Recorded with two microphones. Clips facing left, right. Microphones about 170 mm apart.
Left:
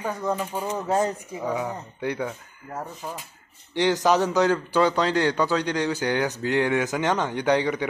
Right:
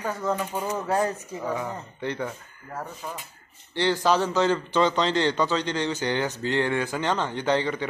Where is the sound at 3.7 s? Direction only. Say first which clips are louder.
Left 2 dB; 15° left (ahead or behind).